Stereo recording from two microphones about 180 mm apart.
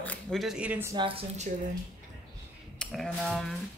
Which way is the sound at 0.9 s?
25° right (ahead or behind).